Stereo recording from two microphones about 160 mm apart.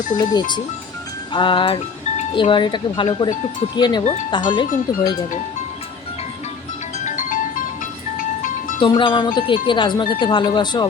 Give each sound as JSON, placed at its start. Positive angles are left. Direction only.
{"t": 0.2, "sound": "speech", "side_deg": 25}
{"t": 1.3, "sound": "wind chime", "side_deg": 30}
{"t": 3.8, "sound": "speech", "side_deg": 25}
{"t": 7.0, "sound": "music", "side_deg": 50}
{"t": 8.8, "sound": "wind chime", "side_deg": 30}
{"t": 10.3, "sound": "speech", "side_deg": 30}